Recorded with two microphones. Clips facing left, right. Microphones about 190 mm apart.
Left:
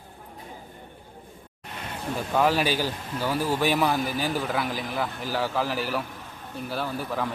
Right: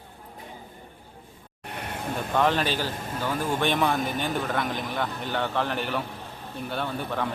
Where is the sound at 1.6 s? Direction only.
60° right (ahead or behind).